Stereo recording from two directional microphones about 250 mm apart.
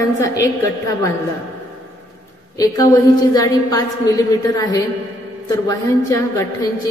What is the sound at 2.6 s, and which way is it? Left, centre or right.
A woman's voice, centre.